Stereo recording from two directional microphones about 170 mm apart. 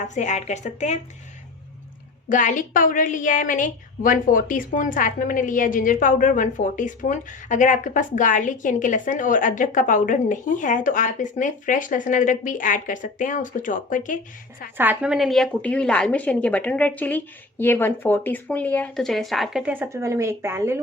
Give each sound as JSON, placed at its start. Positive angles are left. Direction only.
{"t": 0.0, "sound": "a woman's voice", "side_deg": 45}
{"t": 2.3, "sound": "a woman's voice", "side_deg": 50}
{"t": 14.8, "sound": "a woman's voice", "side_deg": -10}